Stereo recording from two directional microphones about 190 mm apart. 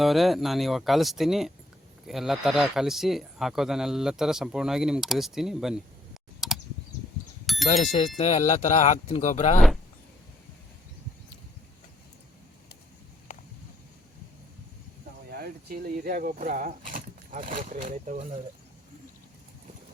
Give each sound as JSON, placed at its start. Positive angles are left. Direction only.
{"t": 0.0, "sound": "speech", "side_deg": 0}
{"t": 6.4, "sound": "computer keyboard", "side_deg": 0}
{"t": 7.4, "sound": "bicycle bell", "side_deg": 0}
{"t": 7.7, "sound": "speech", "side_deg": 35}
{"t": 15.3, "sound": "speech", "side_deg": -55}